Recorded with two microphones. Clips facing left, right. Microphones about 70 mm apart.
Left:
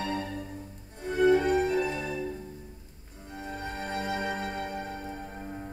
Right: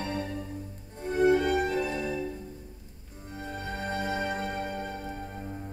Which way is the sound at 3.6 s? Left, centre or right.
Left.